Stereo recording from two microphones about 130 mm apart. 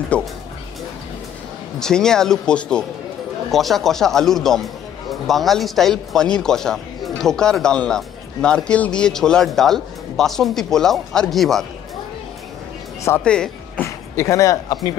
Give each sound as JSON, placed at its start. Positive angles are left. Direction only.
{"t": 0.1, "sound": "speech", "side_deg": 10}
{"t": 1.8, "sound": "speech", "side_deg": 5}
{"t": 13.2, "sound": "speech", "side_deg": 5}
{"t": 13.8, "sound": "speech", "side_deg": 20}